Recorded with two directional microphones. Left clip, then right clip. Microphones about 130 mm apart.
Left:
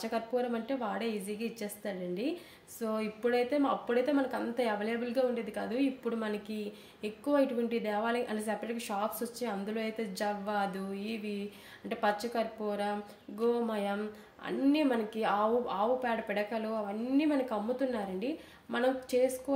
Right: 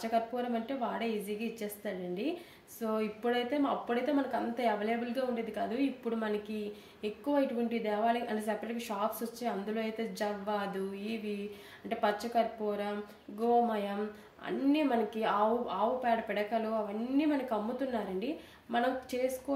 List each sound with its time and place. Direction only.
0.0 s speech: 35° left (ahead or behind)